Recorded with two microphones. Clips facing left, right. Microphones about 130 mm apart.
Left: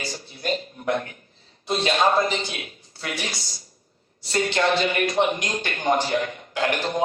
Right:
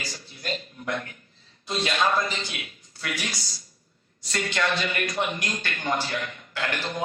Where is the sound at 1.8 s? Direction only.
30° left (ahead or behind).